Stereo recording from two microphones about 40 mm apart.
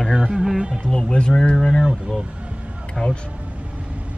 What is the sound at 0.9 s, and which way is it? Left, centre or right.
Speech, left.